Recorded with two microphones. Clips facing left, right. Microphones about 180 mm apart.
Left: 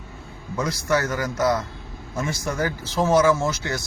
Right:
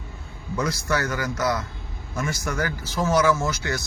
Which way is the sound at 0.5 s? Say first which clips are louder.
Left 2 dB; 20° left (ahead or behind).